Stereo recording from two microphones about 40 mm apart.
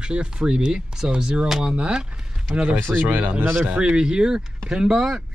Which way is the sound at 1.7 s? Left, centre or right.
Right.